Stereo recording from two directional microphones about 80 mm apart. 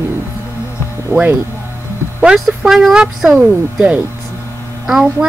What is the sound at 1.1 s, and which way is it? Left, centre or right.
Speech, right.